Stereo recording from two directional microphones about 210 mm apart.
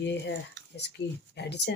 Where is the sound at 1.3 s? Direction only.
55° left (ahead or behind).